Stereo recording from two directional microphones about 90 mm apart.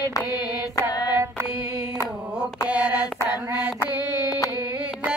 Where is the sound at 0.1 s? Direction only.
40° left (ahead or behind).